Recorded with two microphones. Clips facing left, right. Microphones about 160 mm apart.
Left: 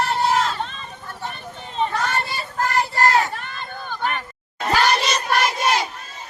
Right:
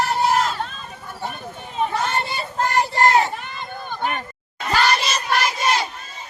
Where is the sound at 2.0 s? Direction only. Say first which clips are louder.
Right 1 dB; 20° right (ahead or behind).